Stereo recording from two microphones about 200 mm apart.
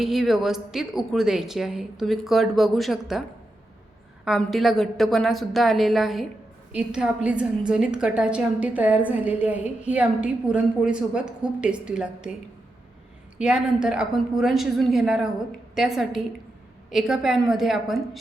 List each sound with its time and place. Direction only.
0.0 s a woman's voice: centre (ahead or behind)
4.3 s a woman's voice: centre (ahead or behind)
13.4 s a woman's voice: 5° right (ahead or behind)